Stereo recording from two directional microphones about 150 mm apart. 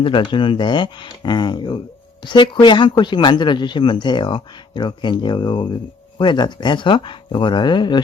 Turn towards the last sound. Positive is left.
turn(degrees=30)  # may be behind; listen again after turning